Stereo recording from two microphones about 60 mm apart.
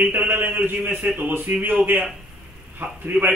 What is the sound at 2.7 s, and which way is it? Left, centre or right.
Speech, right.